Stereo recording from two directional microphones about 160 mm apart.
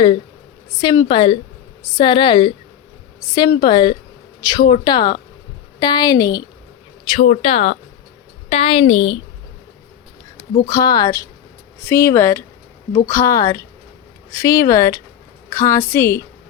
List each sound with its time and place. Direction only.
0.8 s speech: 25° left (ahead or behind)
7.2 s a woman's voice: 40° left (ahead or behind)
10.7 s a woman's voice: 25° left (ahead or behind)